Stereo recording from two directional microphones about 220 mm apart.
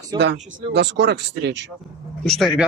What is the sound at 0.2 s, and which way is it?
Speech, 50° right (ahead or behind).